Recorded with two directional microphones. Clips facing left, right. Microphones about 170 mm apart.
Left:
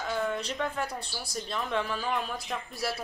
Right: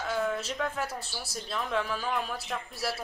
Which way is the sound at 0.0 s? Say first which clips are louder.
Even; centre (ahead or behind).